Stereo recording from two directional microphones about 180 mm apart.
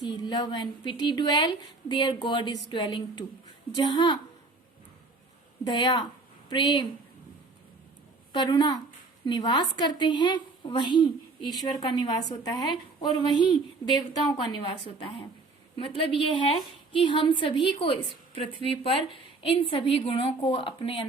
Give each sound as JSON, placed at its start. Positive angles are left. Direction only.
{"t": 0.0, "sound": "a woman's voice", "side_deg": 25}
{"t": 5.6, "sound": "a woman's voice", "side_deg": 25}
{"t": 8.3, "sound": "a woman's voice", "side_deg": 25}
{"t": 14.5, "sound": "a woman's voice", "side_deg": 30}